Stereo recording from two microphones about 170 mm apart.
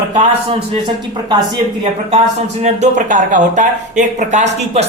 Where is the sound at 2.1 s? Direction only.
40° right (ahead or behind).